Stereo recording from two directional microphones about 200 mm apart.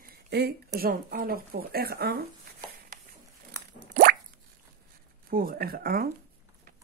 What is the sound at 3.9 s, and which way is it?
Plop, 45° right (ahead or behind).